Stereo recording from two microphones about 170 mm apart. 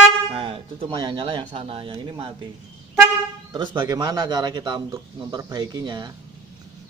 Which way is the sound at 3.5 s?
25° right (ahead or behind).